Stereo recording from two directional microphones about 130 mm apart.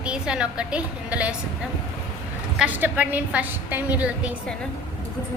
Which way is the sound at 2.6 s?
10° right (ahead or behind).